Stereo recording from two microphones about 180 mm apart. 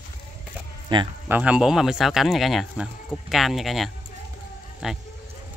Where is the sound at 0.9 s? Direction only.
25° right (ahead or behind).